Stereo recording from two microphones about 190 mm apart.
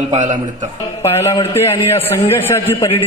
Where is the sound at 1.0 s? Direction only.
15° left (ahead or behind).